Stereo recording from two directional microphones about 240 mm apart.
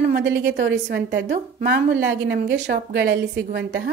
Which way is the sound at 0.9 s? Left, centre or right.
Right.